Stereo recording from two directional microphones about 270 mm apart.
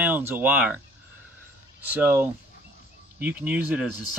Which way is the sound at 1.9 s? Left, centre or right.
Centre.